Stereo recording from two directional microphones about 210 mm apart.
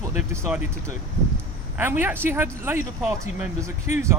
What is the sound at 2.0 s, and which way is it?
Speech, 10° right (ahead or behind).